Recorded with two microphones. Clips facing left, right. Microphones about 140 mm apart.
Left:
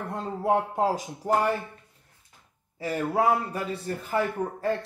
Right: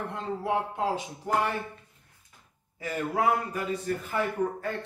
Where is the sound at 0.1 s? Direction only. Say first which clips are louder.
Left 6 dB; 40° left (ahead or behind).